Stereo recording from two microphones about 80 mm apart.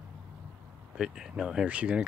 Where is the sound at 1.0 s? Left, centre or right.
Centre.